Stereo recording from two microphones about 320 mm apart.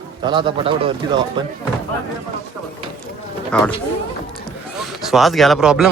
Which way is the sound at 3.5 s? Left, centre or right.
Centre.